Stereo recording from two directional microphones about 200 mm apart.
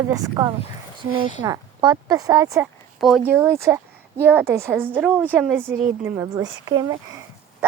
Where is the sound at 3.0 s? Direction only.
Centre (ahead or behind).